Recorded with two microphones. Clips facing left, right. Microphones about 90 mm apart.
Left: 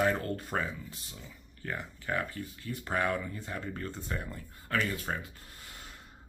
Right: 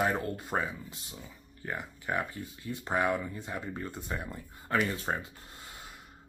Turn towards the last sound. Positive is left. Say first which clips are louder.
# right 2 dB
turn(degrees=-20)  # may be behind; listen again after turning